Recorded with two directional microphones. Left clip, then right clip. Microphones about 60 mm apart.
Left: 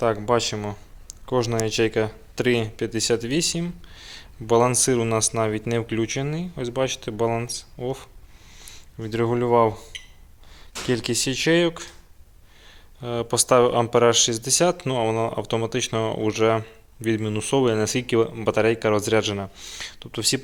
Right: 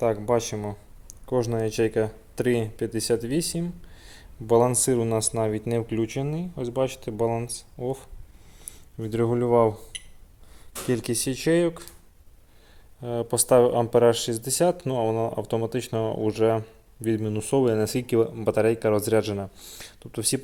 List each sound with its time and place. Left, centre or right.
0.2 s speech: centre
1.2 s speech: centre
7.9 s speech: right
8.5 s a sound: right
9.2 s speech: right
10.9 s speech: right
11.5 s speech: right
13.0 s speech: centre
14.1 s speech: right